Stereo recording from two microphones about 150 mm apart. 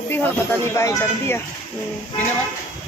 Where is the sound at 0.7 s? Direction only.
20° left (ahead or behind).